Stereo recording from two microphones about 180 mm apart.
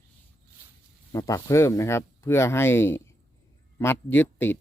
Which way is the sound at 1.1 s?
20° left (ahead or behind).